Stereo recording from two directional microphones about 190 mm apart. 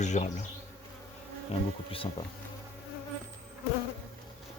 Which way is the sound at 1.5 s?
30° left (ahead or behind).